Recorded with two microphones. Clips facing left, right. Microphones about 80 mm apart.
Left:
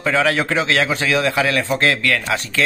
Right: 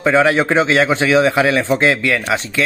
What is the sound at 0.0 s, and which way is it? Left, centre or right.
A man's voice, right.